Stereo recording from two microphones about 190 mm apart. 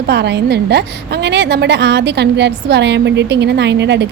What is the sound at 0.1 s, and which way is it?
A woman's voice, 60° right (ahead or behind).